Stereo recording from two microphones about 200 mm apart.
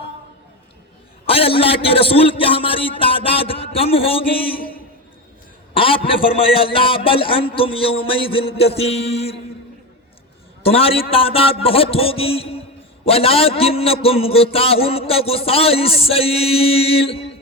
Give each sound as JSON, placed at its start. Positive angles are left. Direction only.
{"t": 1.3, "sound": "a man's voice", "side_deg": 30}
{"t": 5.7, "sound": "a man's voice", "side_deg": 25}
{"t": 10.6, "sound": "a man's voice", "side_deg": 30}